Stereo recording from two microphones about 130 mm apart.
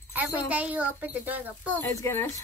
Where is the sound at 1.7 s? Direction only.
20° left (ahead or behind).